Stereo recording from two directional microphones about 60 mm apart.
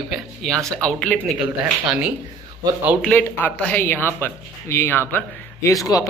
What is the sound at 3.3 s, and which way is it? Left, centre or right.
Speech, left.